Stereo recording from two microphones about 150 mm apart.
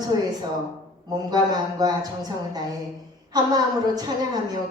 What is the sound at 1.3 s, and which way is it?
Speech, 25° right (ahead or behind).